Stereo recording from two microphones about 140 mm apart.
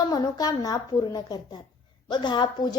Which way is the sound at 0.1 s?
25° left (ahead or behind).